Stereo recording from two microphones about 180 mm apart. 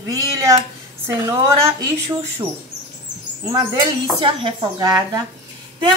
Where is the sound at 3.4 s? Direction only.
20° right (ahead or behind).